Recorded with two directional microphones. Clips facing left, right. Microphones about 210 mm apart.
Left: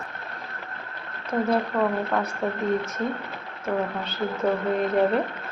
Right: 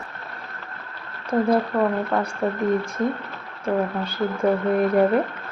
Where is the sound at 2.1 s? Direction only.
5° right (ahead or behind).